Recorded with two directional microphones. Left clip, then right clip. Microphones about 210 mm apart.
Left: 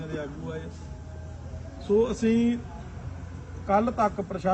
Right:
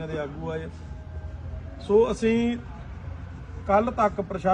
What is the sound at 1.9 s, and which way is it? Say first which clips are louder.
Speech: right 3 dB; 30° right (ahead or behind).